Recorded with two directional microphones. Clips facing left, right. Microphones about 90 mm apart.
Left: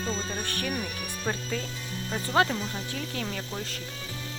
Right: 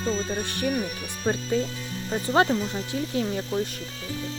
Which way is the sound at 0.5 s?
20° right (ahead or behind).